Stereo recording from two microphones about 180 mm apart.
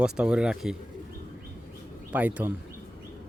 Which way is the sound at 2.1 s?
10° right (ahead or behind).